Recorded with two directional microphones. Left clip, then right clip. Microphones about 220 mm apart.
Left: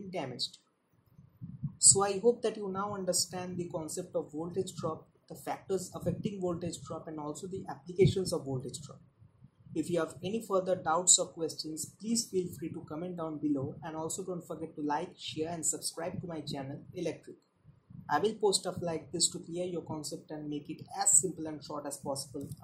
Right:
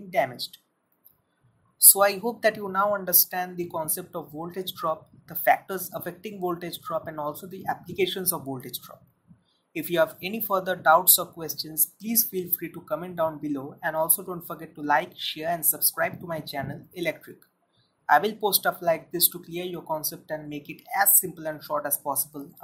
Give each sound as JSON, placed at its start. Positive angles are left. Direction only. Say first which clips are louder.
{"t": 0.1, "sound": "speech", "louder": "right 12 dB", "side_deg": -20}
{"t": 1.9, "sound": "speech", "louder": "right 5 dB", "side_deg": -15}
{"t": 9.7, "sound": "speech", "louder": "right 9 dB", "side_deg": -15}